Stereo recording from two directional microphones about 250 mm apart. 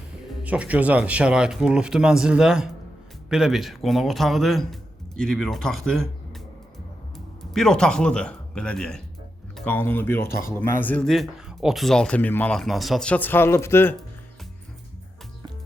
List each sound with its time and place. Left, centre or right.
0.4 s speech: centre
7.5 s speech: centre
10.2 s speech: left
10.5 s speech: centre